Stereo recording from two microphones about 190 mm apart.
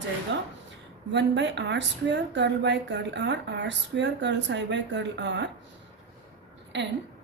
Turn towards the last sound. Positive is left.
turn(degrees=-70)  # may be behind; listen again after turning